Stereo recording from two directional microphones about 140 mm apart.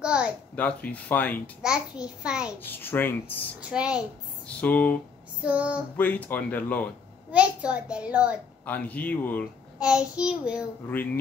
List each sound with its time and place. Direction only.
0.0 s a sound: 10° right (ahead or behind)
0.6 s speech: 10° left (ahead or behind)
1.6 s a child's voice: 5° right (ahead or behind)
2.6 s speech: 15° left (ahead or behind)
3.7 s a child's voice: 5° right (ahead or behind)
4.6 s speech: 10° left (ahead or behind)
5.4 s a child's voice: 10° right (ahead or behind)
5.9 s speech: 10° left (ahead or behind)
7.2 s a child's voice: 10° right (ahead or behind)
8.6 s speech: 10° left (ahead or behind)
9.8 s a child's voice: 5° right (ahead or behind)